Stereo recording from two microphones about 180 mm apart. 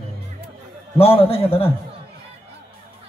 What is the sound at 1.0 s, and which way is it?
Speech, 30° left (ahead or behind).